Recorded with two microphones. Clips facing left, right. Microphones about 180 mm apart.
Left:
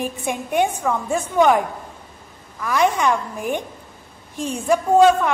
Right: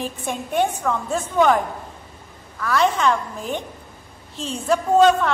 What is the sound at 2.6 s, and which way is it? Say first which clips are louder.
A woman's voice: even; 15° left (ahead or behind).